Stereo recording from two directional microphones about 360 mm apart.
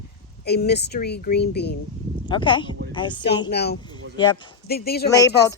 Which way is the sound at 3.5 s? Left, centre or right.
Left.